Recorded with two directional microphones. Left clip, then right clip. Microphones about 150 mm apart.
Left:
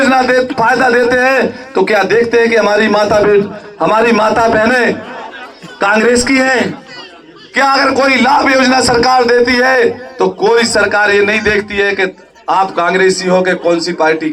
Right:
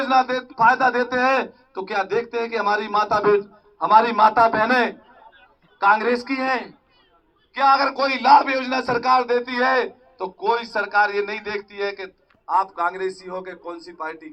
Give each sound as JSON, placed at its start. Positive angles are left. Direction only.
{"t": 0.0, "sound": "a man's voice", "side_deg": 35}
{"t": 7.8, "sound": "a man's voice", "side_deg": 20}
{"t": 8.4, "sound": "a man's voice", "side_deg": 40}
{"t": 11.0, "sound": "a man's voice", "side_deg": 20}
{"t": 12.5, "sound": "a man's voice", "side_deg": 35}